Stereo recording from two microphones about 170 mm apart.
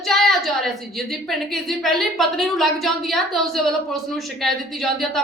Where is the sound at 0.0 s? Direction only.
Centre (ahead or behind).